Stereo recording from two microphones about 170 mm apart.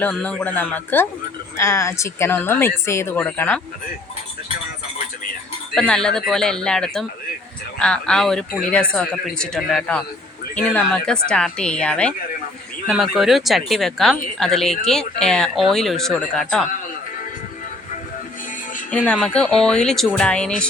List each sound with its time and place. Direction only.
0.0 s speech: 5° left (ahead or behind)
5.7 s speech: 5° left (ahead or behind)
19.0 s speech: 5° left (ahead or behind)